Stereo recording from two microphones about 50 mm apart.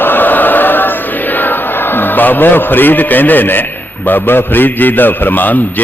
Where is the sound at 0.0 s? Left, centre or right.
Left.